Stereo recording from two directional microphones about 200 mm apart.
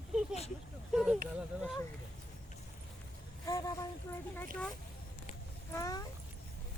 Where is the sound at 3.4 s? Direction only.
15° left (ahead or behind).